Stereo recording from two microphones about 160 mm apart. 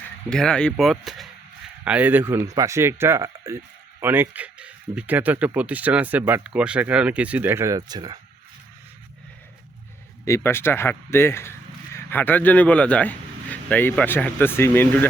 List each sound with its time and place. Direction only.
0.3 s speech: 5° left (ahead or behind); by 8.2 s 25° right (ahead or behind)
10.2 s speech: 15° left (ahead or behind)